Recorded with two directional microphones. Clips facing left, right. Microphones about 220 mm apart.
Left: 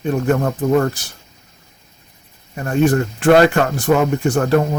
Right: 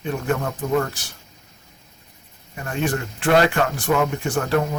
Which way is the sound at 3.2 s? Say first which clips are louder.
Left 5 dB; 40° left (ahead or behind).